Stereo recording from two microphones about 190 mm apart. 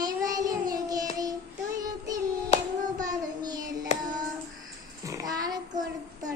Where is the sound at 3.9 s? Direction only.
35° left (ahead or behind).